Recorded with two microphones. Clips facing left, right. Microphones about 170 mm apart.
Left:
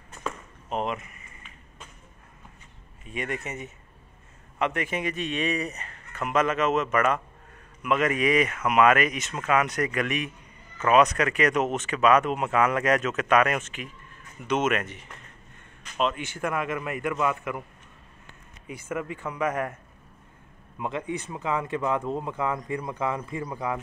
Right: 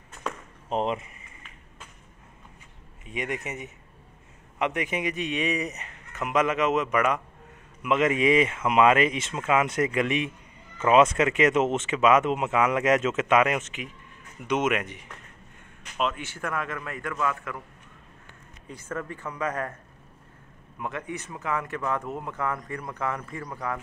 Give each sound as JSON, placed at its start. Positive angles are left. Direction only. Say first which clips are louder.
{"t": 0.7, "sound": "speech", "louder": "right 2 dB", "side_deg": -30}
{"t": 3.1, "sound": "a man's voice", "louder": "even", "side_deg": -15}
{"t": 16.3, "sound": "speech", "louder": "left 3 dB", "side_deg": 15}
{"t": 18.7, "sound": "speech", "louder": "left 2 dB", "side_deg": 10}
{"t": 20.8, "sound": "speech", "louder": "left 3 dB", "side_deg": 25}